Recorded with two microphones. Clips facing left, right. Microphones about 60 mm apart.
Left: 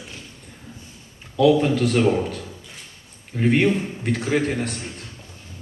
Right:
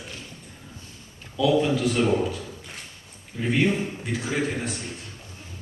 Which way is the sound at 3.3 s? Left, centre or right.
Left.